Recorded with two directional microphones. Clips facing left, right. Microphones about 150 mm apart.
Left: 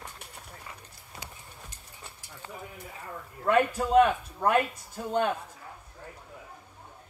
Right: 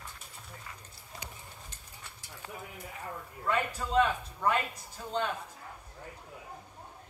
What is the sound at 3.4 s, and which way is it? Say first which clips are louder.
Speech: left 8 dB; 55° left (ahead or behind).